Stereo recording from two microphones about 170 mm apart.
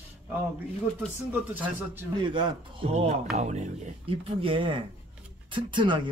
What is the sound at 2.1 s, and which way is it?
Speech, 25° right (ahead or behind).